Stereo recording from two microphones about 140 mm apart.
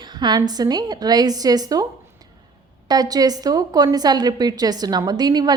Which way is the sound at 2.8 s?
30° right (ahead or behind).